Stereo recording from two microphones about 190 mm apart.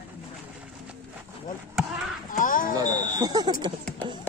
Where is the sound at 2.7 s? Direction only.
20° right (ahead or behind).